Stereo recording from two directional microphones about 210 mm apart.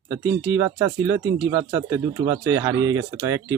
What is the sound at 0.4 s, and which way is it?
Speech, 10° right (ahead or behind).